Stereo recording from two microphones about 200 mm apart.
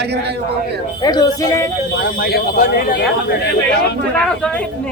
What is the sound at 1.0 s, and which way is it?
Speech, 20° left (ahead or behind).